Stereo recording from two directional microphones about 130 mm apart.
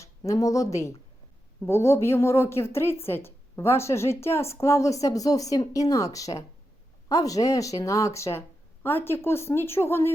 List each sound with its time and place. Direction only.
0.0 s a woman's voice: 25° left (ahead or behind)